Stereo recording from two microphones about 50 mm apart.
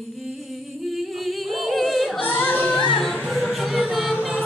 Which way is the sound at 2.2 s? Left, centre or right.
Left.